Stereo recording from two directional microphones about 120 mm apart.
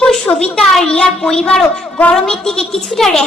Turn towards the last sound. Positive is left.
turn(degrees=5)  # may be behind; listen again after turning